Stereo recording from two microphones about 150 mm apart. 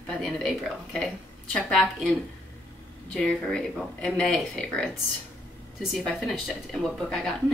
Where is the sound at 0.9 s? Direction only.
Centre (ahead or behind).